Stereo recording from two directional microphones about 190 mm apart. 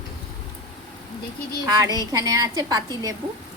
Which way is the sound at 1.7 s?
20° right (ahead or behind).